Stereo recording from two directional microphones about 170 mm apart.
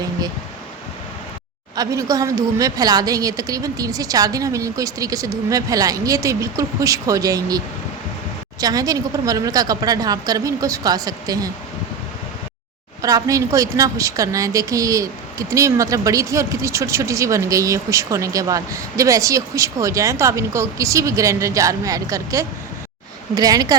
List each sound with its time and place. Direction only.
1.7 s a woman's voice: 20° right (ahead or behind)
8.6 s a woman's voice: 20° right (ahead or behind)
13.0 s a woman's voice: 20° right (ahead or behind)